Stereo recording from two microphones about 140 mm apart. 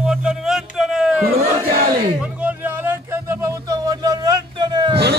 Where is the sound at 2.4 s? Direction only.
10° right (ahead or behind).